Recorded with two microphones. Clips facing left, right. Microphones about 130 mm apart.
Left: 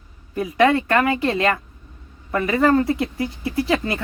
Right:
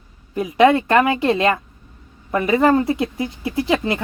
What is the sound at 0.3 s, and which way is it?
Speech, 20° right (ahead or behind).